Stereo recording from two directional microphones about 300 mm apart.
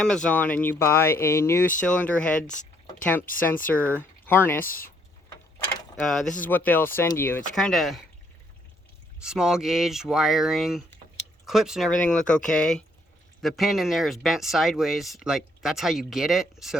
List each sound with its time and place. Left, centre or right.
0.0 s speech: centre
2.5 s a sound: left
3.0 s speech: centre
6.0 s speech: centre
9.2 s speech: centre